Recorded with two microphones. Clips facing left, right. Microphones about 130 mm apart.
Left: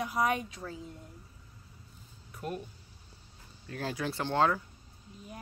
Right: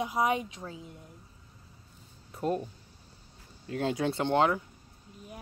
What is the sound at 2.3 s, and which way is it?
Speech, 25° right (ahead or behind).